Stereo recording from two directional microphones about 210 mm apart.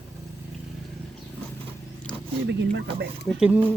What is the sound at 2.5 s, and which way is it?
Speech, 55° right (ahead or behind).